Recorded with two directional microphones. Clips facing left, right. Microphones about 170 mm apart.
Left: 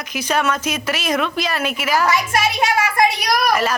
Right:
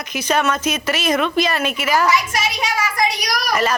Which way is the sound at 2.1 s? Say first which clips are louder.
Left 1 dB; 55° left (ahead or behind).